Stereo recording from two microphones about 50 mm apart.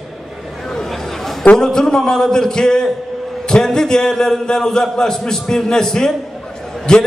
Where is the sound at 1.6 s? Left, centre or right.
Centre.